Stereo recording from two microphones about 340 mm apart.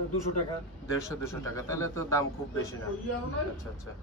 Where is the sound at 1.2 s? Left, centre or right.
Centre.